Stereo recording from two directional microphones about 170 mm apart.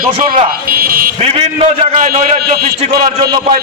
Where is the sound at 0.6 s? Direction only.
60° right (ahead or behind).